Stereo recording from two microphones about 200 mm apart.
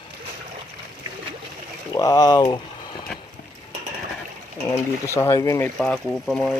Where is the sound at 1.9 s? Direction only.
20° left (ahead or behind).